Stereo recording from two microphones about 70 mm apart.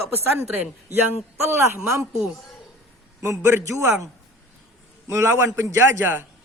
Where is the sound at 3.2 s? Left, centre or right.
Right.